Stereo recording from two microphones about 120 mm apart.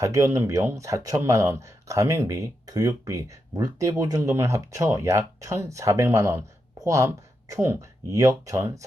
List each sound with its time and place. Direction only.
0.0 s speech: 25° right (ahead or behind)